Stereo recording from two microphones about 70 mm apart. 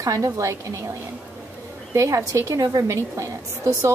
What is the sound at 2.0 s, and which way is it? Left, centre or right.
A woman's voice, right.